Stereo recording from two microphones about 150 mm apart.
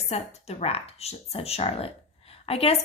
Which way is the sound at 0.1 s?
45° left (ahead or behind).